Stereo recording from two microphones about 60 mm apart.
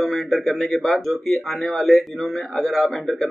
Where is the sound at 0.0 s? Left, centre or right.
Centre.